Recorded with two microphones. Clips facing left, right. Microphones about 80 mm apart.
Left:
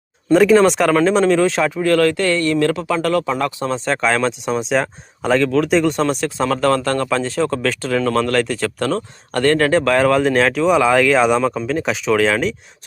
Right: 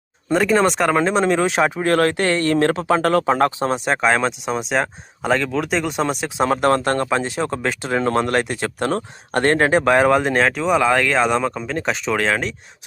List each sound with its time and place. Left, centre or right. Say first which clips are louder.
0.3 s speech: left 5 dB; centre
0.9 s speech: left 3 dB; centre; by 3.5 s right
3.6 s speech: even; right
4.0 s speech: left 1 dB; centre
6.4 s speech: right 1 dB; right
7.2 s speech: left 3 dB; centre
7.4 s speech: left 3 dB; right; by 12.5 s centre